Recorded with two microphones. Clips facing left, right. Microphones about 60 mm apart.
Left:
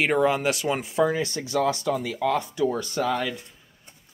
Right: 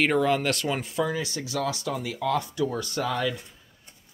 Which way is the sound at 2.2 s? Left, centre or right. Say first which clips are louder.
Left 2 dB; left.